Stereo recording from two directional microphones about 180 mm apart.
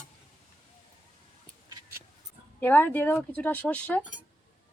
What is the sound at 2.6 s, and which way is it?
Speech, 10° left (ahead or behind).